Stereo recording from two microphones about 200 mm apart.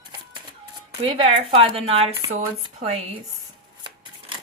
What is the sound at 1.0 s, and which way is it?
Speech, 30° right (ahead or behind).